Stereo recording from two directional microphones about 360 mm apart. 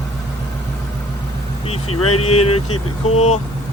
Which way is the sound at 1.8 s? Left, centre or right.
Left.